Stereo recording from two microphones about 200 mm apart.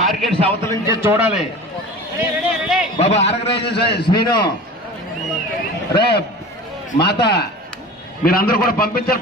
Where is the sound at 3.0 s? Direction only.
30° left (ahead or behind).